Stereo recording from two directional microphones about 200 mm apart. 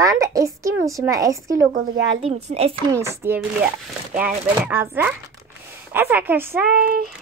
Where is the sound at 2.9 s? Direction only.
15° right (ahead or behind).